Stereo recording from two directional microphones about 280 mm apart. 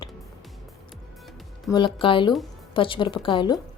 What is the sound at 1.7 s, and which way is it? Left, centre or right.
A woman's voice, centre.